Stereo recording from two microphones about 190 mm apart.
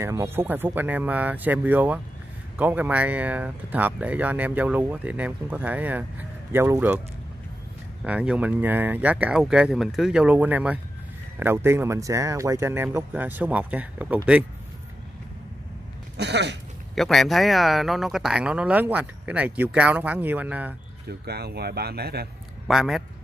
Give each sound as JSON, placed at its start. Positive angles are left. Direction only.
{"t": 0.0, "sound": "speech", "side_deg": -15}
{"t": 8.0, "sound": "speech", "side_deg": -5}
{"t": 16.2, "sound": "speech", "side_deg": -65}
{"t": 16.9, "sound": "speech", "side_deg": 0}
{"t": 21.3, "sound": "speech", "side_deg": -55}
{"t": 22.7, "sound": "speech", "side_deg": 0}